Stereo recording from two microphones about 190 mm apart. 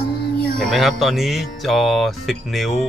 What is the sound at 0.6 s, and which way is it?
Speech, centre (ahead or behind).